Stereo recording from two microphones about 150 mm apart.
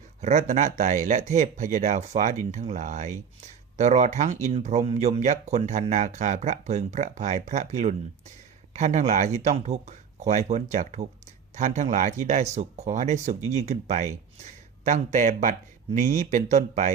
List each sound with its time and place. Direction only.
0.2 s speech: 50° right (ahead or behind)